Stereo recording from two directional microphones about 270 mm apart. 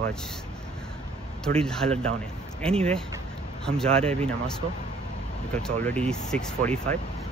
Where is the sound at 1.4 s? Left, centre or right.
Centre.